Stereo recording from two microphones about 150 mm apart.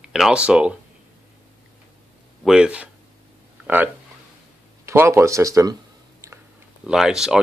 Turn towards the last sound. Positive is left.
turn(degrees=-5)  # may be behind; listen again after turning